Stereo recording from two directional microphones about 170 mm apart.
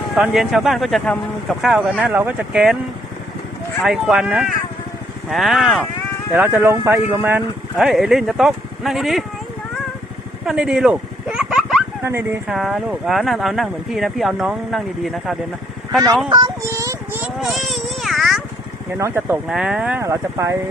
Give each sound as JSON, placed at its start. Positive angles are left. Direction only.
{"t": 0.2, "sound": "speech", "side_deg": 0}
{"t": 3.8, "sound": "speech", "side_deg": 0}
{"t": 10.4, "sound": "a sound", "side_deg": -5}
{"t": 12.0, "sound": "speech", "side_deg": -15}
{"t": 12.5, "sound": "speech", "side_deg": 0}
{"t": 16.3, "sound": "a sound", "side_deg": -20}
{"t": 17.4, "sound": "baby cry", "side_deg": 0}
{"t": 18.9, "sound": "speech", "side_deg": -15}
{"t": 19.5, "sound": "speech", "side_deg": -5}